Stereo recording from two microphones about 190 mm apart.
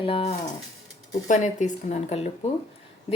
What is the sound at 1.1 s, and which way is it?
Speech, 40° left (ahead or behind).